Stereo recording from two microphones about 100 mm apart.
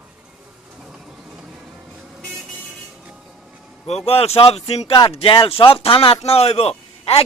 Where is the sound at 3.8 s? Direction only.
90° left.